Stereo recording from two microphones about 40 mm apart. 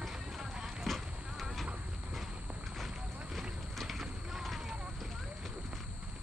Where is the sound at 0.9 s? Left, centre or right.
Centre.